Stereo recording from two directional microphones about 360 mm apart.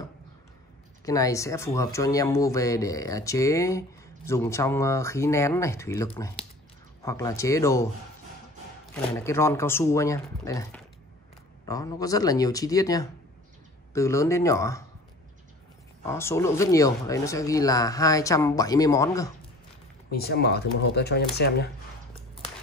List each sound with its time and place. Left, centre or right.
1.0 s speech: centre
9.1 s speech: centre
16.1 s speech: centre
20.1 s speech: left